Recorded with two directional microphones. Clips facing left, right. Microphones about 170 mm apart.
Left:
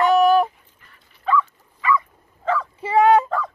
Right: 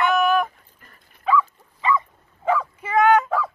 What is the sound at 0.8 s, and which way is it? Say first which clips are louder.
Dog: right 3 dB; 45° right (ahead or behind).